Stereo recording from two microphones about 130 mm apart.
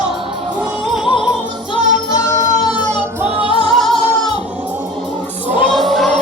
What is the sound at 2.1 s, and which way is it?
Music, 25° left (ahead or behind).